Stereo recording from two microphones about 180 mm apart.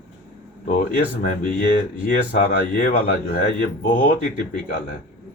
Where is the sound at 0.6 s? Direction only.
50° left (ahead or behind).